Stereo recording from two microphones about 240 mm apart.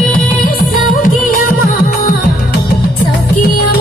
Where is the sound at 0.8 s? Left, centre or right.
Left.